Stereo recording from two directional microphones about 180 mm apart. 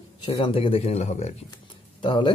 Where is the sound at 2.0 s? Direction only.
25° left (ahead or behind).